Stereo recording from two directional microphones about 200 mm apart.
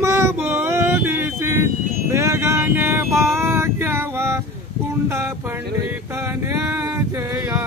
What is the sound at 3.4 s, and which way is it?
Female singing, 10° right (ahead or behind).